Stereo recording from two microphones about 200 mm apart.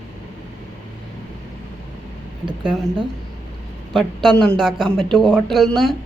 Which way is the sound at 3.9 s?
Centre (ahead or behind).